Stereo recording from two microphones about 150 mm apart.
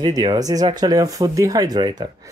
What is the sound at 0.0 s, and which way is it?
Speech, 25° right (ahead or behind).